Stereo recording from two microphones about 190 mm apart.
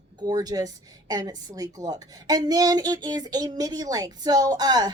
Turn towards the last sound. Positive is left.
turn(degrees=-20)  # may be behind; listen again after turning